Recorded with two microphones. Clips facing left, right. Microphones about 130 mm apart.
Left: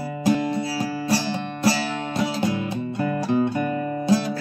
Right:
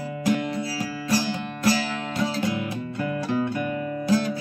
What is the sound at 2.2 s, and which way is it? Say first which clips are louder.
Music: left 2 dB; 25° left (ahead or behind).